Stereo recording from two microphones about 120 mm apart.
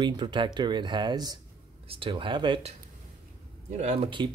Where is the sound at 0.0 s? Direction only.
40° right (ahead or behind).